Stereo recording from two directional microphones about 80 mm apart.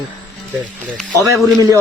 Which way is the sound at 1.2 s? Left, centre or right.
Right.